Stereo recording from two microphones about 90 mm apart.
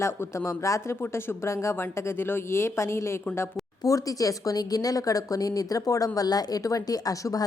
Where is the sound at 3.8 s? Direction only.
40° left (ahead or behind).